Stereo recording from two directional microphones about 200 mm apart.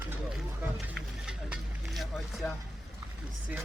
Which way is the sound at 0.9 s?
Centre (ahead or behind).